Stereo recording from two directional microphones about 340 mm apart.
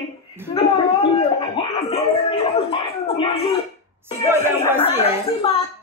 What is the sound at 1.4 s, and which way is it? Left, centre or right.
Music, centre.